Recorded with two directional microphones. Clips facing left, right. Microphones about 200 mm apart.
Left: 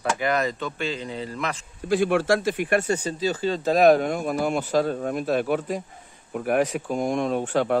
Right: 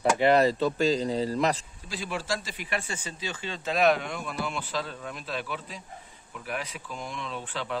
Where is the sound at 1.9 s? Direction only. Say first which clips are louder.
Left 12 dB; 55° left (ahead or behind).